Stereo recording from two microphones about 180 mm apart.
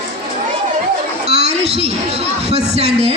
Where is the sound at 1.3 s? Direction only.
35° right (ahead or behind).